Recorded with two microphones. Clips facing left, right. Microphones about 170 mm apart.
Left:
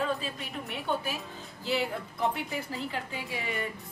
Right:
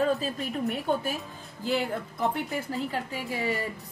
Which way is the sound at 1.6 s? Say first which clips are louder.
Right 3 dB; 45° right (ahead or behind).